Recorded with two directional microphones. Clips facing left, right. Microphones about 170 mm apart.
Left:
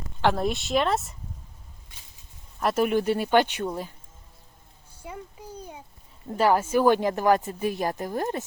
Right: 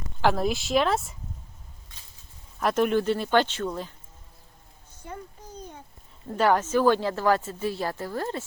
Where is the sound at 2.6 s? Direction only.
5° left (ahead or behind).